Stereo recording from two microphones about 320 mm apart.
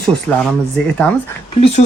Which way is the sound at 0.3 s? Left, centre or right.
Centre.